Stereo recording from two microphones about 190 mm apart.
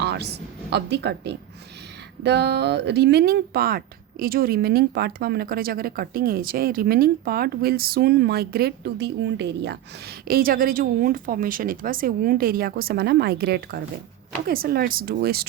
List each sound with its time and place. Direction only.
0.0 s speech: 60° right (ahead or behind)